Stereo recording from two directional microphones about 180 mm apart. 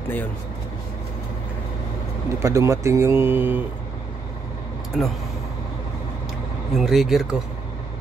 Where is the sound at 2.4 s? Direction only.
15° right (ahead or behind).